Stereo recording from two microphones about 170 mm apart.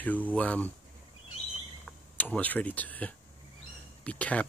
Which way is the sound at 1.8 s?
10° left (ahead or behind).